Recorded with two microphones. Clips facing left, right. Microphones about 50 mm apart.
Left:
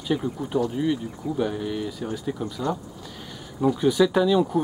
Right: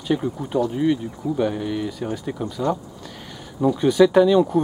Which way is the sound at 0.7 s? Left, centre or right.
Centre.